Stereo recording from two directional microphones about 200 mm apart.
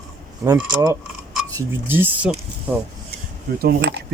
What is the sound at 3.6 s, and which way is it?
Speech, 50° right (ahead or behind).